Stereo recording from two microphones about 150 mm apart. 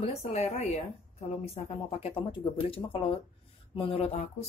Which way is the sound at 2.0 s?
35° left (ahead or behind).